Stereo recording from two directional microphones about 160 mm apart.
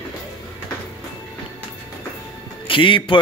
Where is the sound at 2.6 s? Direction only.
30° left (ahead or behind).